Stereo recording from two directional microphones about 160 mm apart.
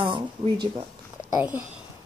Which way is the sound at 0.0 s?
30° right (ahead or behind).